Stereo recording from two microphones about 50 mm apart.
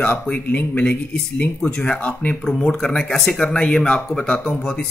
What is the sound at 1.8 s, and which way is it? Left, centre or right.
Speech, left.